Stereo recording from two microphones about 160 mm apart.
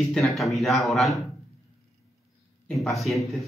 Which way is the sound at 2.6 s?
Centre (ahead or behind).